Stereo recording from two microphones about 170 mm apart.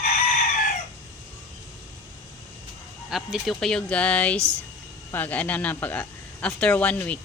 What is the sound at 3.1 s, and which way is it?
Speech, centre (ahead or behind).